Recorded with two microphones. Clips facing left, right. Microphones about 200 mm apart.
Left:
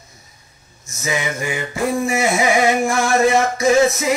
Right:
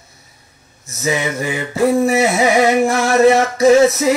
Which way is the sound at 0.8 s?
35° right (ahead or behind).